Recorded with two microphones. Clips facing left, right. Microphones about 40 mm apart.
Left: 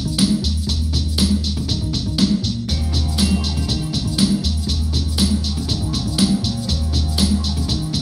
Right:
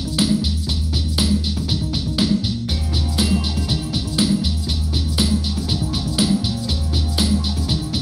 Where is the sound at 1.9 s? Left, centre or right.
Centre.